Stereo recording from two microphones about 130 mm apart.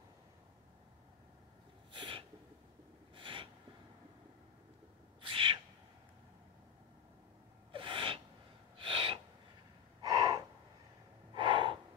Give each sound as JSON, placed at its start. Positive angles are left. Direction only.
{"t": 1.9, "sound": "a sound", "side_deg": -40}
{"t": 5.2, "sound": "owl", "side_deg": -40}
{"t": 7.7, "sound": "gasp", "side_deg": -40}
{"t": 10.0, "sound": "gasp", "side_deg": -25}
{"t": 11.3, "sound": "gasp", "side_deg": -40}